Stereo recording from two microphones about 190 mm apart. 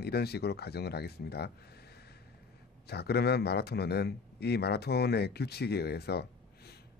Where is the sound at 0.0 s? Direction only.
55° left (ahead or behind).